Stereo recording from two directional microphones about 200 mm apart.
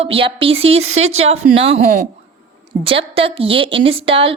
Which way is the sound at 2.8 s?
25° right (ahead or behind).